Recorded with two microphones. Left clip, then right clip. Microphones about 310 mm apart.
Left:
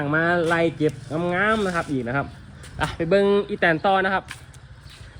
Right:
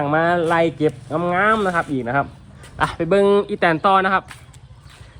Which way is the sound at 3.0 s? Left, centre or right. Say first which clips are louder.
Right 3 dB; right.